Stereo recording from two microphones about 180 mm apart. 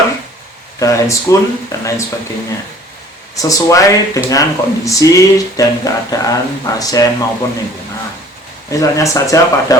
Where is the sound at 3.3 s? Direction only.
20° left (ahead or behind).